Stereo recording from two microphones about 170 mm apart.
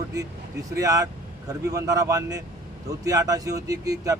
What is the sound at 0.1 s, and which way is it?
Speech, 20° right (ahead or behind).